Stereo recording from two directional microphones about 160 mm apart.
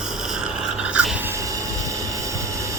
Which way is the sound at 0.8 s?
5° right (ahead or behind).